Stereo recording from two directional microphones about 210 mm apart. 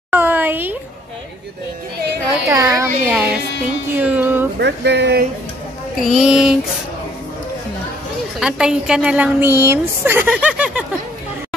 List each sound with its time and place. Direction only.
0.1 s a sound: 10° right (ahead or behind)
2.5 s speech: 15° right (ahead or behind)
3.9 s music: 10° right (ahead or behind)
4.6 s speech: 55° right (ahead or behind)
5.9 s a woman's voice: centre (ahead or behind)
8.4 s a woman's voice: 5° right (ahead or behind)